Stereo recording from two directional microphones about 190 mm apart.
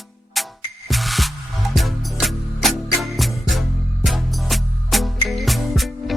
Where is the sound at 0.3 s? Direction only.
Centre (ahead or behind).